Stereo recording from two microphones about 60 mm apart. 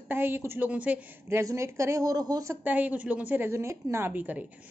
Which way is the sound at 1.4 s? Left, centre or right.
Right.